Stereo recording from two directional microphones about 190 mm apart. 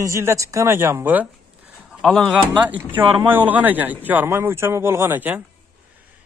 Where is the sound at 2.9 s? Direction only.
10° right (ahead or behind).